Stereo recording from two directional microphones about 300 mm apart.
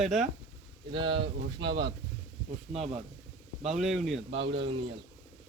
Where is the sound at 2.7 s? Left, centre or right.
Right.